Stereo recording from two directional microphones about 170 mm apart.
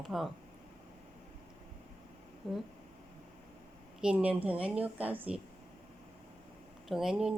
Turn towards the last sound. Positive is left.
turn(degrees=-5)  # may be behind; listen again after turning